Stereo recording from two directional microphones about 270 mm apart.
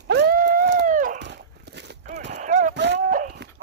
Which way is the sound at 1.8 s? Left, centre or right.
Right.